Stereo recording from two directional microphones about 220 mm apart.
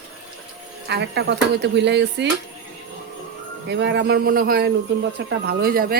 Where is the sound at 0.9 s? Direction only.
50° right (ahead or behind).